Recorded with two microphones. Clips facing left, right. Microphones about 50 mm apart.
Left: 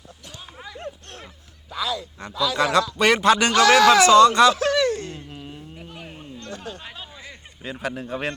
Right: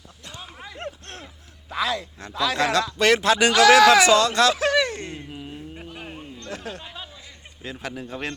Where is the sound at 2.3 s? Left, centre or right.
Right.